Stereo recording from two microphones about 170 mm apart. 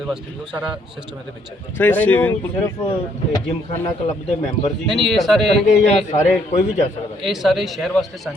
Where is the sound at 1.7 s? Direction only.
10° left (ahead or behind).